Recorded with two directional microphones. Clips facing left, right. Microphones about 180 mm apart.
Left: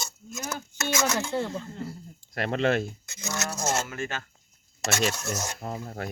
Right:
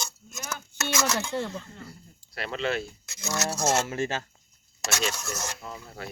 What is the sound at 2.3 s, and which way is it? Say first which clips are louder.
Cutlery: left 5 dB; 50° left (ahead or behind).